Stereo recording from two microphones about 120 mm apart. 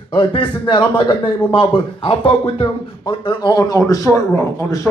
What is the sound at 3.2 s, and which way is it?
A man's voice, 35° left (ahead or behind).